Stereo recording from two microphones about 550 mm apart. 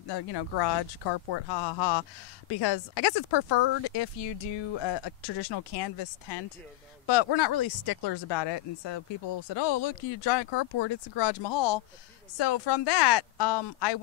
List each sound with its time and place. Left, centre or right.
0.1 s speech: left